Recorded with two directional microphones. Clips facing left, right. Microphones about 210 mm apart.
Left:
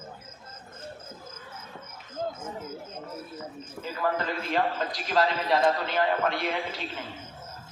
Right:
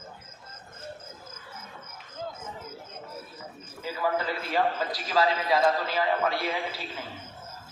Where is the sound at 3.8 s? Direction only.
45° left (ahead or behind).